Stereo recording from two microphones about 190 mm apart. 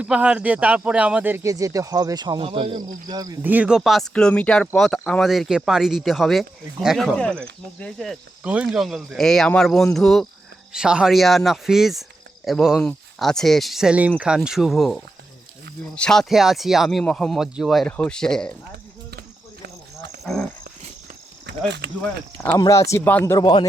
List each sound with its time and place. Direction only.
0.0 s speech: 5° right (ahead or behind)
21.4 s speech: 65° right (ahead or behind)
22.4 s speech: 15° left (ahead or behind)